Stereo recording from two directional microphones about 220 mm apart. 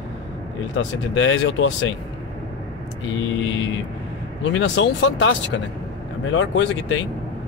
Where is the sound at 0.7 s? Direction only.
55° left (ahead or behind).